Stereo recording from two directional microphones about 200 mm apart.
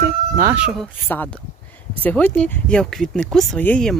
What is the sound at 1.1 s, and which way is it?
Speech, 10° left (ahead or behind).